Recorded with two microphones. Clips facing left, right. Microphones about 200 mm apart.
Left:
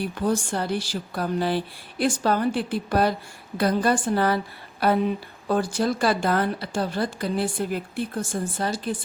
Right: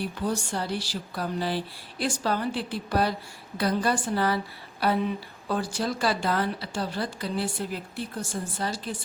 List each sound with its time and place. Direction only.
0.3 s speech: 55° left (ahead or behind)
5.5 s speech: 50° left (ahead or behind)